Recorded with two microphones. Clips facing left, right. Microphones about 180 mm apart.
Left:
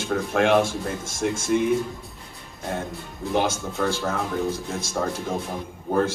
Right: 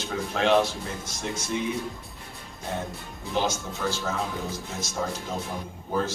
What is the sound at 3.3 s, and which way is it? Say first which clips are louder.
Speech: left 4 dB; 55° left (ahead or behind).